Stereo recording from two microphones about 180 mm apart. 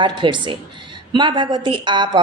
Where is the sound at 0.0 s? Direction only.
25° right (ahead or behind).